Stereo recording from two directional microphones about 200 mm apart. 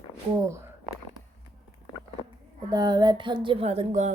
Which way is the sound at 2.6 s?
20° right (ahead or behind).